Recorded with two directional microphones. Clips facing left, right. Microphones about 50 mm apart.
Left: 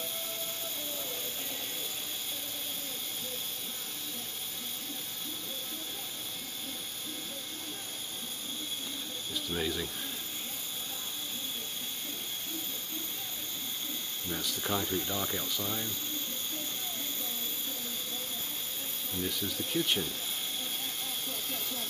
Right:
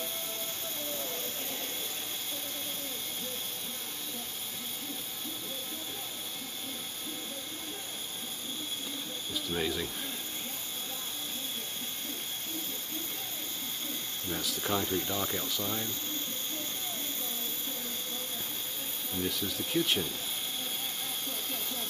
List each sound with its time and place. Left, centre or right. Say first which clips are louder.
0.9 s vehicle: right 2 dB; centre
9.3 s speech: right 1 dB; centre
14.3 s speech: right 1 dB; centre
19.1 s speech: right 1 dB; centre
21.3 s hiss: even; centre